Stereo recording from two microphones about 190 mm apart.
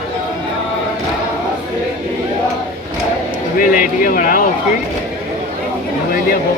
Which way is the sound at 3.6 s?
45° left (ahead or behind).